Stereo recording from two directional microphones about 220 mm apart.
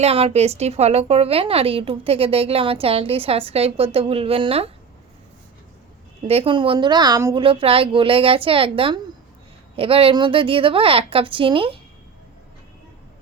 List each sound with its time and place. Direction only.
0.0 s a woman's voice: 25° right (ahead or behind)
6.2 s a woman's voice: 25° right (ahead or behind)